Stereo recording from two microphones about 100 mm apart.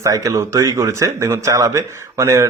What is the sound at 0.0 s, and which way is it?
Speech, 35° right (ahead or behind).